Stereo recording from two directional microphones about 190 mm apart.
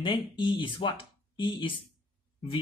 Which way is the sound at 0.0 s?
25° left (ahead or behind).